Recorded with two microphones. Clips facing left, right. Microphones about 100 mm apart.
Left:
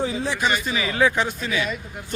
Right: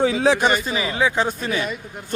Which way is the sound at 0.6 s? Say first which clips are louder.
Right 1 dB; 30° right (ahead or behind).